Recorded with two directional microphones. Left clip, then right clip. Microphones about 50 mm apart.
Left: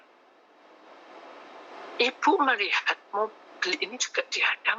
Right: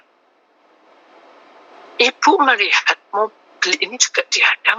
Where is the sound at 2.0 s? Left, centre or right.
Right.